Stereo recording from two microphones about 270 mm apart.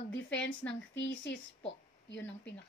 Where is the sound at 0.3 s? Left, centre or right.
Left.